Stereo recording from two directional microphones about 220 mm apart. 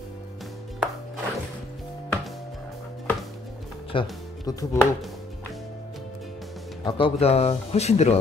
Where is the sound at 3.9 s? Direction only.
25° left (ahead or behind).